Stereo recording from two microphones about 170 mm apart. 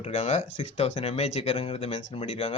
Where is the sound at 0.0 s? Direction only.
40° left (ahead or behind).